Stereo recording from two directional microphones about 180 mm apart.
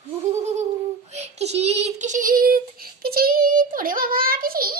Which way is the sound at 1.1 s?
35° right (ahead or behind).